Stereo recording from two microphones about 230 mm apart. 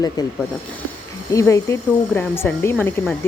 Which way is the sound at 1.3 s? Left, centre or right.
Centre.